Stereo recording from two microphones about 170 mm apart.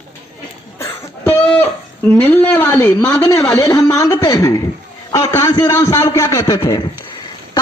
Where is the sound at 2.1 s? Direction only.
10° left (ahead or behind).